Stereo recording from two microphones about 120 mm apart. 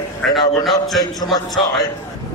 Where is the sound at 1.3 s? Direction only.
35° left (ahead or behind).